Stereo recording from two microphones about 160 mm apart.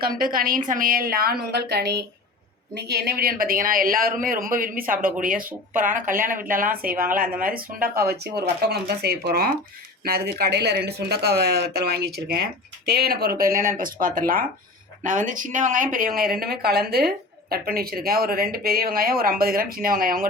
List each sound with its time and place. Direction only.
0.0 s a woman's voice: 65° right (ahead or behind)